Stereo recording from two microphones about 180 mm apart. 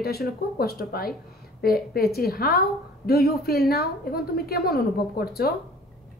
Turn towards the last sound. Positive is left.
turn(degrees=60)  # may be behind; listen again after turning